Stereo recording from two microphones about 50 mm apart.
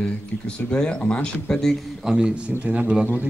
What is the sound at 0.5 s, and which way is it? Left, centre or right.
Speech, centre.